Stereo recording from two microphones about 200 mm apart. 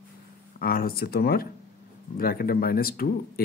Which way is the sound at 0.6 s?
50° left (ahead or behind).